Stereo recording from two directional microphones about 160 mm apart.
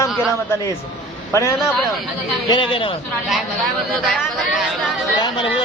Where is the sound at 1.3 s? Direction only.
20° left (ahead or behind).